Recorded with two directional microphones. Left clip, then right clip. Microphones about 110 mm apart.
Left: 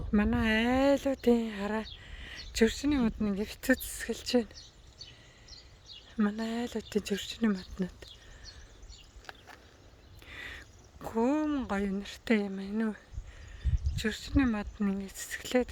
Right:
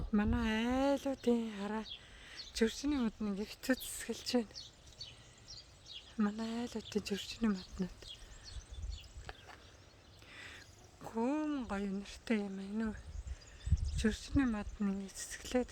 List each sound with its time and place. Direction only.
0.1 s speech: 45° left (ahead or behind)
6.1 s speech: 40° left (ahead or behind)
10.2 s speech: 55° left (ahead or behind)